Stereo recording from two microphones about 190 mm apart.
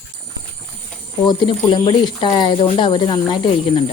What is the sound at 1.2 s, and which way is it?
Speech, 25° left (ahead or behind).